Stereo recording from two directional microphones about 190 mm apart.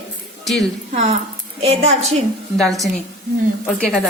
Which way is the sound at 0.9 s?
35° right (ahead or behind).